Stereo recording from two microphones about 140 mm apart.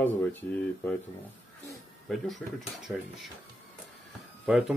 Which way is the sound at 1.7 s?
Centre (ahead or behind).